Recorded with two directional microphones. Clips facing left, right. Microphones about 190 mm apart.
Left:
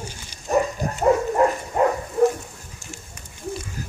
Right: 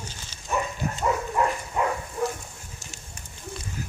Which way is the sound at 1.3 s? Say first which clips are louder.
Left 6 dB; 45° left (ahead or behind).